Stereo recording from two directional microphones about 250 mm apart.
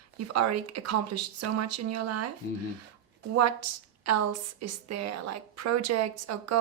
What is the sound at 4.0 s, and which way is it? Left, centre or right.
A woman's voice, right.